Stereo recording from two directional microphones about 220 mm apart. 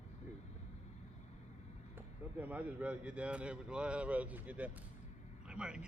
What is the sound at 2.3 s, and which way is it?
A man's voice, 5° right (ahead or behind).